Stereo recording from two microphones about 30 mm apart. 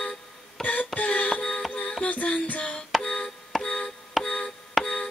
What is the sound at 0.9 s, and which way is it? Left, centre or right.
Music, left.